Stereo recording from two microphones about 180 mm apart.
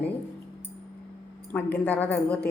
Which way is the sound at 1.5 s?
10° left (ahead or behind).